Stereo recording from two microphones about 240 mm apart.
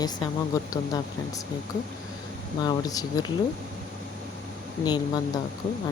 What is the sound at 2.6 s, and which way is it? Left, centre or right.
Speech, centre.